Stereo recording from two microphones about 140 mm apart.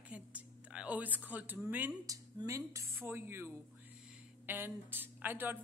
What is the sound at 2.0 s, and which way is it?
A woman's voice, 25° right (ahead or behind).